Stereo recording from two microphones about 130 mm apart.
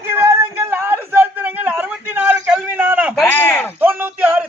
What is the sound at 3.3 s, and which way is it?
Speech, 15° left (ahead or behind).